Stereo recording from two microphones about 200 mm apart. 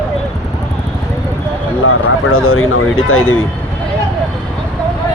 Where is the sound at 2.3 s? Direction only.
90° left.